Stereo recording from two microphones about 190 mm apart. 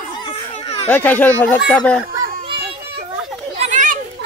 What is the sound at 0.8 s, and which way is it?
Speech, 10° left (ahead or behind).